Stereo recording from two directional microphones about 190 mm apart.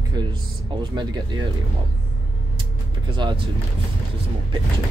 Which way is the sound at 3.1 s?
25° right (ahead or behind).